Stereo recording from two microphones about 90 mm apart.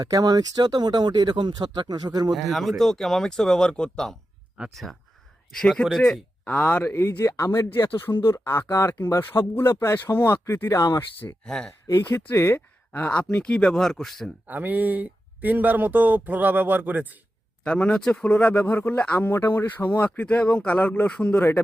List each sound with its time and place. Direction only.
0.0 s speech: 45° right (ahead or behind)
2.3 s speech: centre (ahead or behind)
6.4 s speech: 20° left (ahead or behind)
6.9 s speech: 30° left (ahead or behind)
11.4 s speech: 5° left (ahead or behind)
11.9 s speech: 25° left (ahead or behind); by 14.3 s 5° left (ahead or behind)
14.4 s speech: 20° right (ahead or behind)
17.6 s speech: 15° left (ahead or behind)